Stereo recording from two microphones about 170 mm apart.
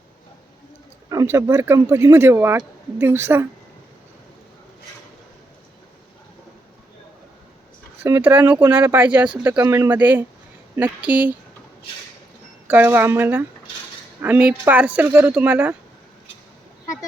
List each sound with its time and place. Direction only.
1.1 s speech: 20° right (ahead or behind)
8.0 s speech: 10° right (ahead or behind)
12.6 s speech: 10° right (ahead or behind)